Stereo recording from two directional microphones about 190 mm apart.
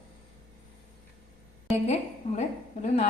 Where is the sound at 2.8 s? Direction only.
35° left (ahead or behind).